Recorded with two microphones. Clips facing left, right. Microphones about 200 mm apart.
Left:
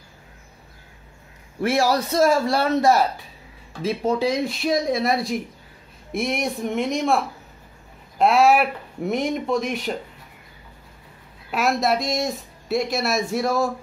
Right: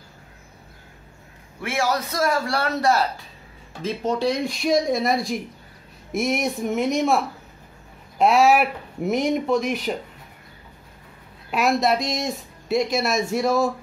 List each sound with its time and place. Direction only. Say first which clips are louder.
1.6 s a man's voice: left 4 dB; 35° left (ahead or behind)
3.8 s speech: left 1 dB; 5° left (ahead or behind)
8.2 s speech: even; centre (ahead or behind)
11.5 s speech: right 1 dB; centre (ahead or behind)